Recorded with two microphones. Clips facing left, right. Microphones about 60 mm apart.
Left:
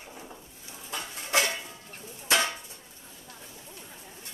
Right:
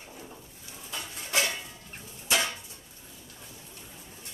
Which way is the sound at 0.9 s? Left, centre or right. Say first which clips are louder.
Left 3 dB; left.